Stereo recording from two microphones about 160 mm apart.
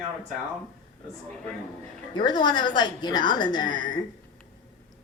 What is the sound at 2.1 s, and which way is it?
A woman's voice, 30° left (ahead or behind).